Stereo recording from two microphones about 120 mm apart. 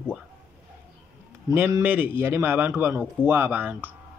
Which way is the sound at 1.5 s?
15° right (ahead or behind).